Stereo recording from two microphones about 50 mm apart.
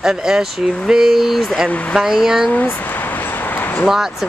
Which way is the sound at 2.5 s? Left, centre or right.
Left.